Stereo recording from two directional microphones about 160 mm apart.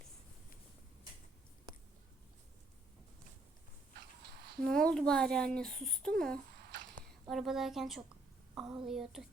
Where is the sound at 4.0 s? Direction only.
90° right.